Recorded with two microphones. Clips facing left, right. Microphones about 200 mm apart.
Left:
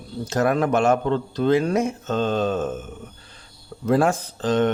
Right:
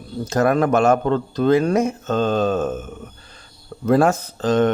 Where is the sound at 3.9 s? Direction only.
45° right (ahead or behind).